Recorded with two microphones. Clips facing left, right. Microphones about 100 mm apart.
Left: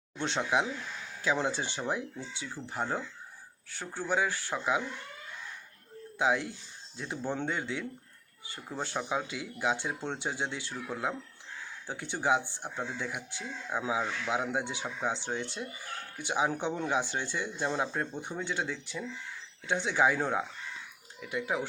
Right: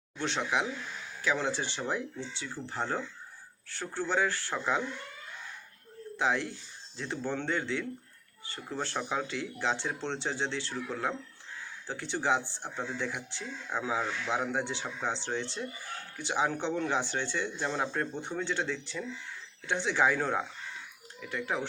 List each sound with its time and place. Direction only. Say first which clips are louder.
0.2 s speech: left 1 dB; 20° left (ahead or behind)
6.1 s speech: left 1 dB; 15° left (ahead or behind)